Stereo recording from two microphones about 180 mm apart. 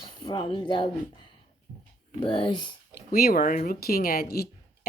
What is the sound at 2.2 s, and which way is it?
Speech, 25° left (ahead or behind).